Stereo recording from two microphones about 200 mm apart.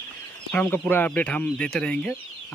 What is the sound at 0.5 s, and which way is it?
Speech, 10° left (ahead or behind).